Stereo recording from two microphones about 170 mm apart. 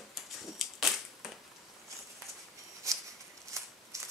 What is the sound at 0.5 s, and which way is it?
Crushing, centre (ahead or behind).